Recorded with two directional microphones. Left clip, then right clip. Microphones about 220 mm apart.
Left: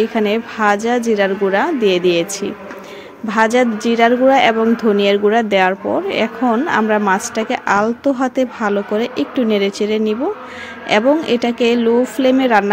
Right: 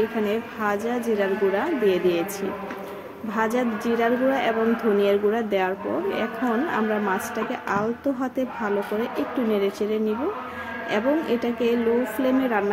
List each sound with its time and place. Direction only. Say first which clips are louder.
0.2 s a woman's voice: left 9 dB; 40° left (ahead or behind)
3.3 s a woman's voice: left 11 dB; 40° left (ahead or behind)